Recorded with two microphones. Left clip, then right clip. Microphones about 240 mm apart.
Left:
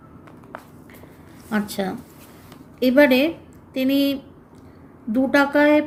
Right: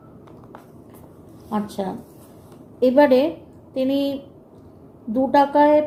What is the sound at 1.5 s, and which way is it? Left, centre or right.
A woman's voice, left.